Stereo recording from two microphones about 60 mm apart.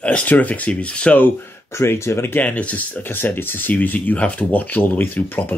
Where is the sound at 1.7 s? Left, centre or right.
Left.